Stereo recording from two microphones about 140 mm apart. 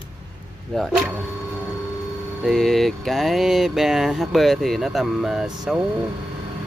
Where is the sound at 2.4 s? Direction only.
Centre (ahead or behind).